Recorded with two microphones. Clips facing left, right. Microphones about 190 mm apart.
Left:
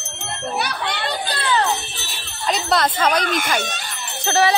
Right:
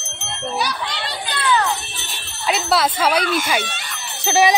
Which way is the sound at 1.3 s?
30° left (ahead or behind).